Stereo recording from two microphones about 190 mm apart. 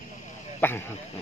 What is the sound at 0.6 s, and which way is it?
Speech, 10° left (ahead or behind).